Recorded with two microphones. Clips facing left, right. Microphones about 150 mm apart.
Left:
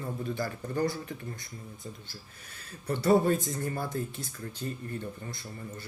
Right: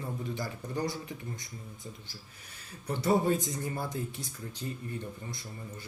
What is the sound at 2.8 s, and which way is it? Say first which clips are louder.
Speech: left 3 dB; 15° right (ahead or behind).